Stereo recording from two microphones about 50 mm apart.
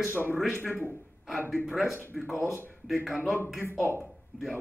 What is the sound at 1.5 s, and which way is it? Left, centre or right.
A man's voice, centre.